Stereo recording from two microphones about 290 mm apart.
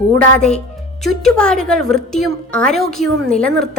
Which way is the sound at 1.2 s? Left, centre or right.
Centre.